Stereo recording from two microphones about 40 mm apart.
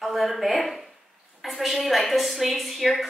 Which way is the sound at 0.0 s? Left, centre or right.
Centre.